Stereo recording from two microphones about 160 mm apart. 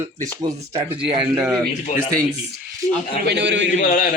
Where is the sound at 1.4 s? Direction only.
5° right (ahead or behind).